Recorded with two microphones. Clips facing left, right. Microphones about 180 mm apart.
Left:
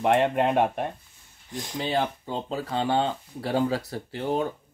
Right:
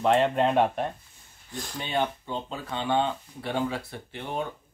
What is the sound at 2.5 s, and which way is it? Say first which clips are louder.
Speech: left 2 dB; 35° left (ahead or behind).